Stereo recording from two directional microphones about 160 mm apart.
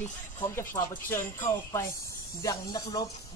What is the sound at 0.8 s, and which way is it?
Music, 20° left (ahead or behind).